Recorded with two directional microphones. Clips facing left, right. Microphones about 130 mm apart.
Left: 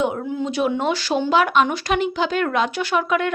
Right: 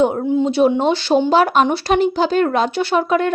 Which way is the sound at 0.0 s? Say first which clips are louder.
Right 7 dB; 35° right (ahead or behind).